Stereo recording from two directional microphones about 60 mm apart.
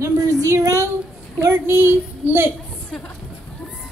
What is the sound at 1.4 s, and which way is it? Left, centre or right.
A woman's voice, right.